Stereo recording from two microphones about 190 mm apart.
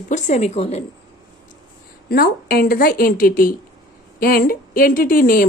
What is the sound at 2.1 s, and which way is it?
Speech, 55° left (ahead or behind).